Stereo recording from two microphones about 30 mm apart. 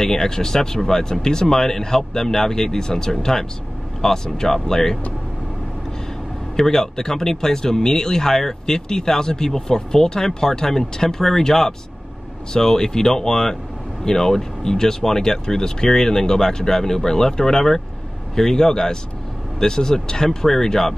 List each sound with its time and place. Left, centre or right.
0.0 s speech: centre
6.5 s speech: centre